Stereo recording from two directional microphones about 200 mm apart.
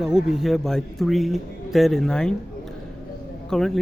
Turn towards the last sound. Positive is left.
turn(degrees=0)  # may be behind; listen again after turning